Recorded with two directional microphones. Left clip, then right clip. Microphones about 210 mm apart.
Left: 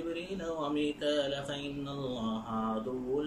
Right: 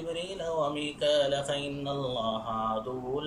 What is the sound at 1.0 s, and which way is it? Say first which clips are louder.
Mantra: right 10 dB; 15° left (ahead or behind).